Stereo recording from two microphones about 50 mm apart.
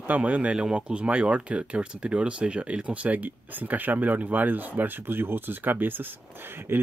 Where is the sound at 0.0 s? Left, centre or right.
Right.